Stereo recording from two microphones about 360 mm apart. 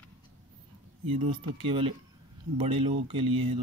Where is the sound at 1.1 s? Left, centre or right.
Centre.